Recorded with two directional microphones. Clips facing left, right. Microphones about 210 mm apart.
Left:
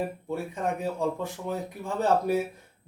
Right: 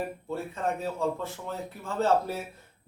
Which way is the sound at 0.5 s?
15° left (ahead or behind).